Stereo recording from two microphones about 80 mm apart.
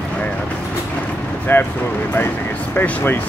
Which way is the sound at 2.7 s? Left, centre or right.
Left.